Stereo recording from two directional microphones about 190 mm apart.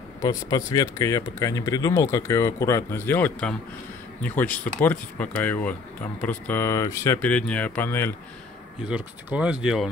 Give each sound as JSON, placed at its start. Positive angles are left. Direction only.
{"t": 0.2, "sound": "speech", "side_deg": 20}
{"t": 8.8, "sound": "speech", "side_deg": -5}